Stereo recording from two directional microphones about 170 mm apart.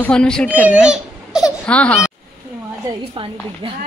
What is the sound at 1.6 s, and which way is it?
Speech, 5° left (ahead or behind).